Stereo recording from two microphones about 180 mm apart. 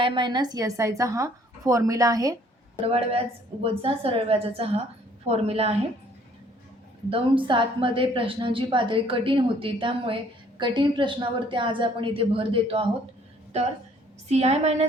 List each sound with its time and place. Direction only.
0.0 s a woman's voice: 25° right (ahead or behind)
2.8 s a woman's voice: 35° right (ahead or behind)
7.1 s a woman's voice: 30° right (ahead or behind)
14.3 s a woman's voice: 35° right (ahead or behind)